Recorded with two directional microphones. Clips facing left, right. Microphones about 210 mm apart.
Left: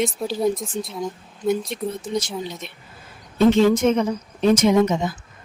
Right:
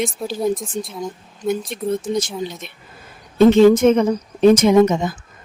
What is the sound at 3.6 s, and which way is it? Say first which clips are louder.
Speech: right 5 dB; 55° right (ahead or behind).